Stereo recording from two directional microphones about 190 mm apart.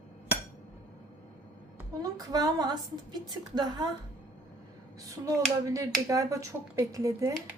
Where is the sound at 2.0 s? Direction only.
20° right (ahead or behind).